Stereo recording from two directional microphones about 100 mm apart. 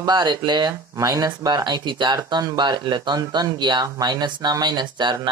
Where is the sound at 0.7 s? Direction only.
35° right (ahead or behind); by 5.3 s 50° right (ahead or behind).